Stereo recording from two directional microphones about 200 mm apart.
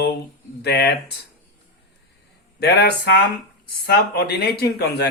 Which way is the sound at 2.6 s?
55° left (ahead or behind).